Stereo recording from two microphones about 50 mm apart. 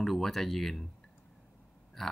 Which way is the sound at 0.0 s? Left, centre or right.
Centre.